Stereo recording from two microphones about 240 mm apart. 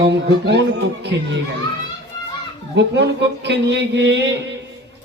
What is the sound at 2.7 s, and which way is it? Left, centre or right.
A man's voice, right.